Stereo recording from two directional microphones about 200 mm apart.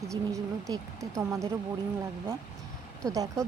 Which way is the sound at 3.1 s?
15° right (ahead or behind).